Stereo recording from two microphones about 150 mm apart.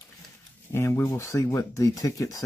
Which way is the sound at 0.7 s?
15° left (ahead or behind).